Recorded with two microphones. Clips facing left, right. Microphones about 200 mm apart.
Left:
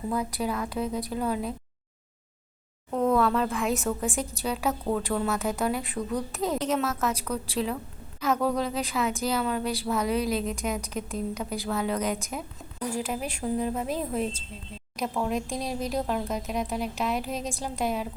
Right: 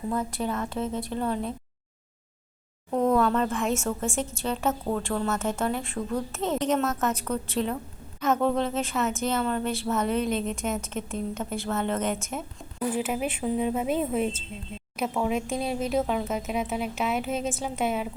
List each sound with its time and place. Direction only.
0.1 s speech: 10° left (ahead or behind)
2.9 s a sound: 10° right (ahead or behind)
3.2 s speech: centre (ahead or behind)
6.4 s a woman's voice: 10° left (ahead or behind)
12.1 s speech: 5° right (ahead or behind)